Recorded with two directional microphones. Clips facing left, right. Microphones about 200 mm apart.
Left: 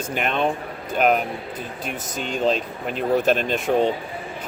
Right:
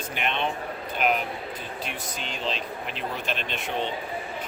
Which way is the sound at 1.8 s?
45° left (ahead or behind).